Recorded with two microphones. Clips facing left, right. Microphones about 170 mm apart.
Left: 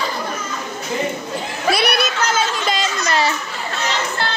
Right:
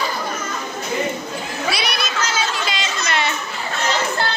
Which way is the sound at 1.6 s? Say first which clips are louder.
Left 7 dB; 55° left (ahead or behind).